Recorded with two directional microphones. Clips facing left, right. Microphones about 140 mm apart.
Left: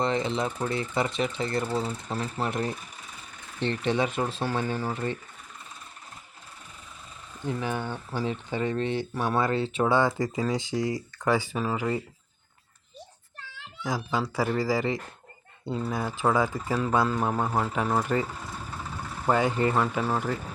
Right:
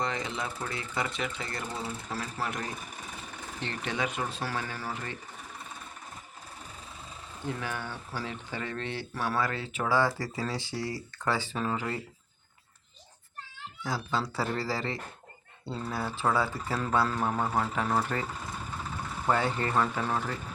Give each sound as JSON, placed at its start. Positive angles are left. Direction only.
{"t": 0.0, "sound": "speech", "side_deg": 25}
{"t": 7.4, "sound": "speech", "side_deg": 20}
{"t": 13.8, "sound": "speech", "side_deg": 15}